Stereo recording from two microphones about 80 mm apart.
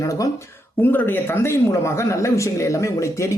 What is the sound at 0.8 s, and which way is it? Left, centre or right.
A man's voice, left.